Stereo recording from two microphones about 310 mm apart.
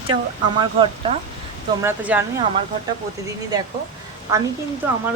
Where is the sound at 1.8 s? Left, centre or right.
Centre.